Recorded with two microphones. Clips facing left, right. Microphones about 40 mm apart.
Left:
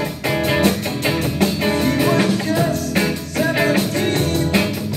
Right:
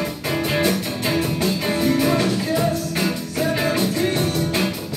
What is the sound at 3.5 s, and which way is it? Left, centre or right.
Music, left.